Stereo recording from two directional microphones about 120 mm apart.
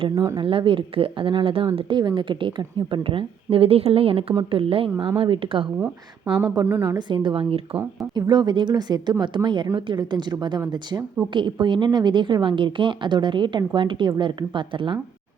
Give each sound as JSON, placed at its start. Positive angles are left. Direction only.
{"t": 0.3, "sound": "speech", "side_deg": -45}
{"t": 6.5, "sound": "speech", "side_deg": -25}
{"t": 6.9, "sound": "a woman's voice", "side_deg": -40}
{"t": 8.1, "sound": "a woman's voice", "side_deg": -35}